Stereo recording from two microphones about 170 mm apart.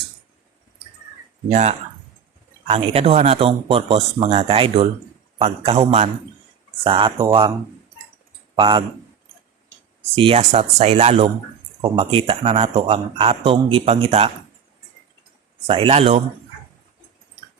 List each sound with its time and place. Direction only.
2.6 s speech: 35° right (ahead or behind)
8.5 s speech: 30° right (ahead or behind)
10.2 s speech: 35° right (ahead or behind)
15.6 s speech: 30° right (ahead or behind)